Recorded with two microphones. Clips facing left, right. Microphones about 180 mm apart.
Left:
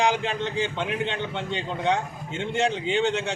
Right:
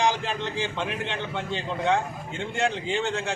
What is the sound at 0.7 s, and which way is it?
A man's voice, 20° left (ahead or behind).